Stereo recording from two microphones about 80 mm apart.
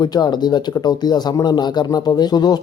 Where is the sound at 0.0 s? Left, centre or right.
Left.